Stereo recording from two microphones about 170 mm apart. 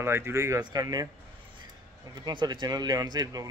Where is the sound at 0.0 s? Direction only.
15° right (ahead or behind).